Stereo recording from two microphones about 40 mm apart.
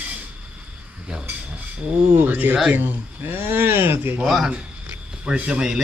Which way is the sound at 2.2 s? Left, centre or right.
Right.